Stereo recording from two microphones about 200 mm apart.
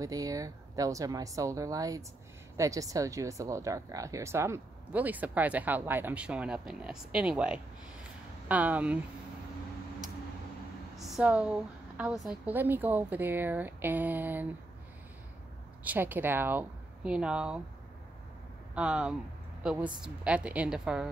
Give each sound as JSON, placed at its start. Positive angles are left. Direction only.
{"t": 0.0, "sound": "speech", "side_deg": -15}
{"t": 11.0, "sound": "speech", "side_deg": 0}
{"t": 15.8, "sound": "speech", "side_deg": -10}
{"t": 18.8, "sound": "a woman's voice", "side_deg": -5}